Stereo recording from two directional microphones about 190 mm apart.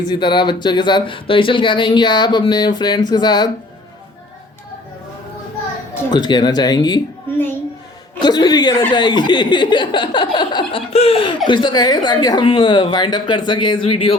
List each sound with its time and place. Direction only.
0.0 s speech: 25° left (ahead or behind)
6.1 s speech: 25° left (ahead or behind)